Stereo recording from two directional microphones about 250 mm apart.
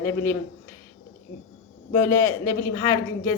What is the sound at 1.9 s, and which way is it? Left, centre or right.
A woman's voice, centre.